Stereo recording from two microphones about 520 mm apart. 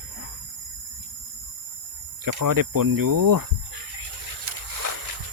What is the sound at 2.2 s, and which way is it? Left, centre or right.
Speech, right.